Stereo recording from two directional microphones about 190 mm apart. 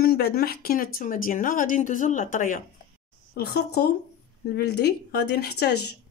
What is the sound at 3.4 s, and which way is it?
A woman's voice, 55° left (ahead or behind).